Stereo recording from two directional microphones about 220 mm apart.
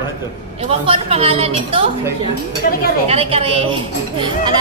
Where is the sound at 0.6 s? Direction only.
25° right (ahead or behind).